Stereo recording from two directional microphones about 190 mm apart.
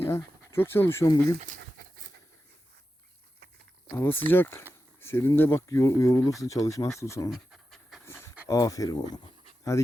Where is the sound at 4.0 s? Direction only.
10° left (ahead or behind).